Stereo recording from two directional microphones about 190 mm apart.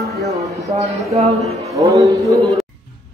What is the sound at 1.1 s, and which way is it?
Speech, 35° right (ahead or behind).